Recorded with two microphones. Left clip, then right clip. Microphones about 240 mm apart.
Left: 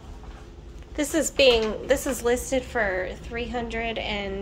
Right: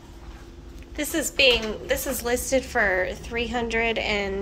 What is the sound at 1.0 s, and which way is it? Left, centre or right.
A woman's voice, left.